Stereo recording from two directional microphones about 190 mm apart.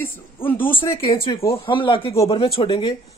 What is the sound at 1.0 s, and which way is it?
Speech, 25° left (ahead or behind).